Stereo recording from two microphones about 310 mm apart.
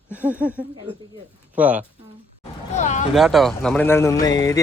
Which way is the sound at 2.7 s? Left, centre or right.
Left.